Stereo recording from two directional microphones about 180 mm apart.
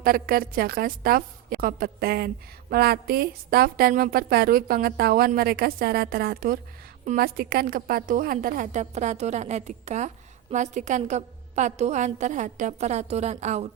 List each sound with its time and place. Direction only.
0.0 s a woman's voice: 55° right (ahead or behind); by 13.7 s 35° right (ahead or behind)